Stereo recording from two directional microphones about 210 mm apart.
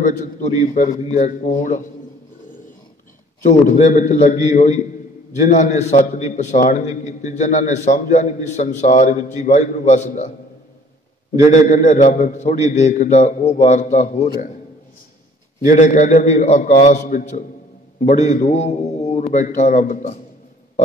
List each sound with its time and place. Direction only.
0.0 s a man's voice: 35° left (ahead or behind)
3.4 s a man's voice: 35° left (ahead or behind)
11.5 s a man's voice: 35° left (ahead or behind)
15.6 s a man's voice: 40° left (ahead or behind)